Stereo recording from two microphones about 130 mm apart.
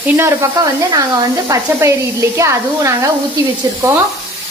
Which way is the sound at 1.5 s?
20° right (ahead or behind).